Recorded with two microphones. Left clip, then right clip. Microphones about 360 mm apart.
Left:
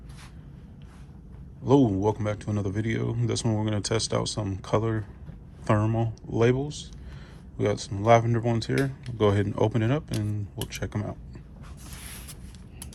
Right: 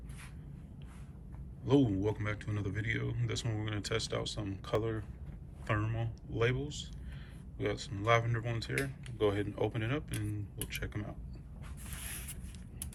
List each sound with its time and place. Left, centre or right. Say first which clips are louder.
1.6 s speech: left 9 dB; centre